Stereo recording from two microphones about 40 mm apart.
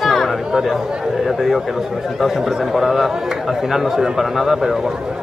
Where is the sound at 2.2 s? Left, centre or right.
Centre.